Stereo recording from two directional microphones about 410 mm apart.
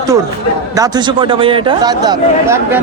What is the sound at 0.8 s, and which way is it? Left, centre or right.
A man's voice, centre.